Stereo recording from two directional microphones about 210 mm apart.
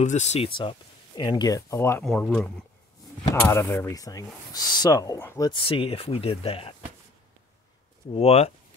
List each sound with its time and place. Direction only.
0.0 s speech: 35° left (ahead or behind); by 2.0 s 10° left (ahead or behind)
2.0 s speech: centre (ahead or behind); by 6.7 s 25° left (ahead or behind)
8.1 s speech: 30° left (ahead or behind)